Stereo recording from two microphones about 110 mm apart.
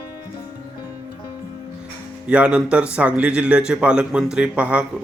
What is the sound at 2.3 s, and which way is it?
Speech, 10° right (ahead or behind).